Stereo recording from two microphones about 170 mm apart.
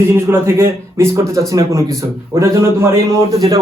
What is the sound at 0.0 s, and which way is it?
A man's voice, 15° right (ahead or behind).